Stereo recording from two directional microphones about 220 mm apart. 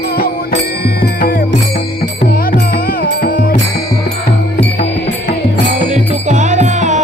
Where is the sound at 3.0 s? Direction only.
40° left (ahead or behind).